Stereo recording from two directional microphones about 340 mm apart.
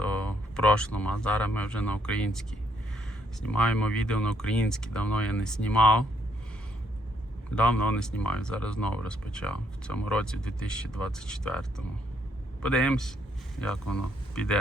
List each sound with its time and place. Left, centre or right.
0.0 s speech: centre
3.4 s speech: centre
7.5 s speech: centre
12.6 s speech: centre